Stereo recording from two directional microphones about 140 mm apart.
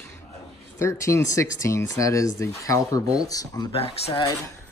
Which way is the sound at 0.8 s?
20° left (ahead or behind).